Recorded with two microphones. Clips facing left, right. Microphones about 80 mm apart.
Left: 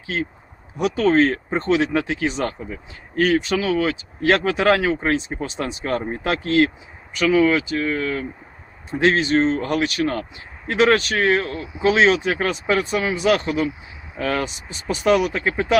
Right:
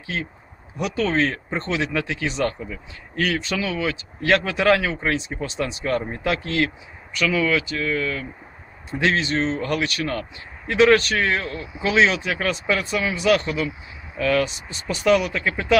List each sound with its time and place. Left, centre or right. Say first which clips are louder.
0.8 s speech: left 5 dB; left
1.5 s speech: left 6 dB; centre
2.6 s speech: left 1 dB; left
9.6 s speech: left 3 dB; left
14.8 s speech: left 1 dB; left